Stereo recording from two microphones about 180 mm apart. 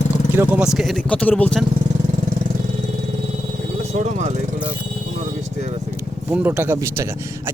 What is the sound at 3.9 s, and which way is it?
Speech, 40° right (ahead or behind).